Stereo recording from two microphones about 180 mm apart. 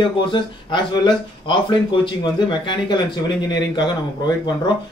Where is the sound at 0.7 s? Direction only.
25° left (ahead or behind).